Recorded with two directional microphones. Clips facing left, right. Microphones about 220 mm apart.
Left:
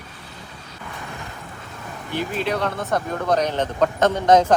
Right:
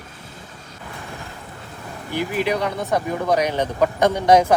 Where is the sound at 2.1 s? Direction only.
15° right (ahead or behind).